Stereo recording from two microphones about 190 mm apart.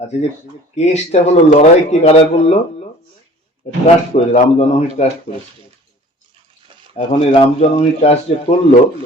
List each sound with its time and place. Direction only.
0.8 s speech: 35° left (ahead or behind)
3.6 s speech: 35° left (ahead or behind)
6.9 s speech: 35° left (ahead or behind)